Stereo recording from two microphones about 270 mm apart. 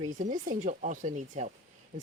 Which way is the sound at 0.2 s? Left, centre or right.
Right.